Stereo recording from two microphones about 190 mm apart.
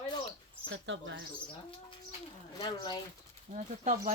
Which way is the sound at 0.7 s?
75° right (ahead or behind).